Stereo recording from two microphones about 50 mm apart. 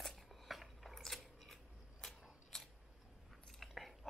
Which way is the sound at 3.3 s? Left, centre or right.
Centre.